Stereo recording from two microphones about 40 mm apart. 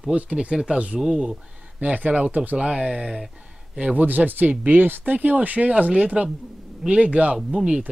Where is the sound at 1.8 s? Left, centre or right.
Right.